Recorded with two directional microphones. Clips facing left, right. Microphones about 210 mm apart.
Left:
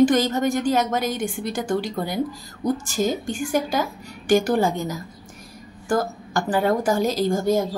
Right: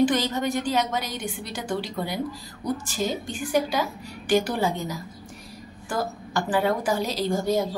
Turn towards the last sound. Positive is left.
turn(degrees=50)  # may be behind; listen again after turning